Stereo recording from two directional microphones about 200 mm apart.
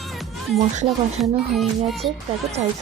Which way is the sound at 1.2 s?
Centre (ahead or behind).